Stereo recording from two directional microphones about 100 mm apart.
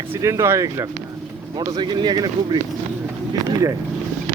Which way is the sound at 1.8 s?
50° right (ahead or behind).